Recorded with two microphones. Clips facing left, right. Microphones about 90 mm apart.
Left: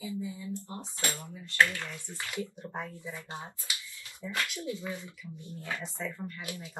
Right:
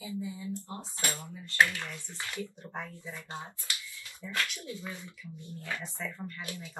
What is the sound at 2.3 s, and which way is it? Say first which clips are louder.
Speech: left 3 dB; 15° left (ahead or behind).